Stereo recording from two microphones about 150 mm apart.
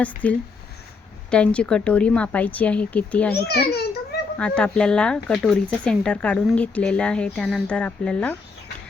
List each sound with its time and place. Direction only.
0.2 s speech: 10° left (ahead or behind)
3.3 s a child's voice: 90° left
4.4 s speech: 5° left (ahead or behind)